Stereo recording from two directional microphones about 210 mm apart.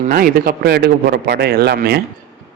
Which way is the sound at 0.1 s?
45° right (ahead or behind).